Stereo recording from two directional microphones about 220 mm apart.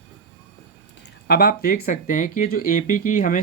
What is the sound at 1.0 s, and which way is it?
Speech, 45° left (ahead or behind).